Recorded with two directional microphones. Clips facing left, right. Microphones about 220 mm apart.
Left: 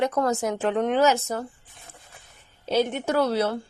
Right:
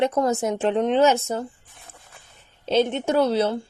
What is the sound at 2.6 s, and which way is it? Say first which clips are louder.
Speech: right 3 dB; 25° right (ahead or behind).